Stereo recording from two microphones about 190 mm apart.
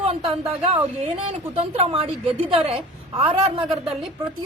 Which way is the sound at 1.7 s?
30° right (ahead or behind).